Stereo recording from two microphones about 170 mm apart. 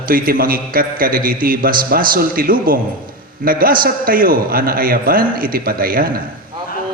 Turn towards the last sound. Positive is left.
turn(degrees=-60)  # may be behind; listen again after turning